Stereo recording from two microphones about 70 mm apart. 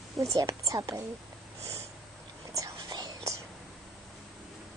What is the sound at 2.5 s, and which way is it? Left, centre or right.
Whispering, right.